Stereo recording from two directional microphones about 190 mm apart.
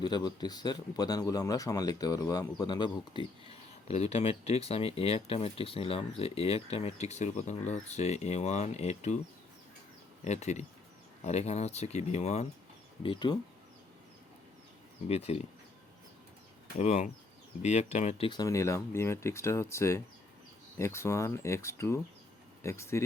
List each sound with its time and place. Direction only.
0.0 s speech: 20° left (ahead or behind)
10.2 s speech: 35° left (ahead or behind)
15.0 s speech: 35° left (ahead or behind)
16.7 s speech: 35° left (ahead or behind)
18.3 s speech: 20° left (ahead or behind)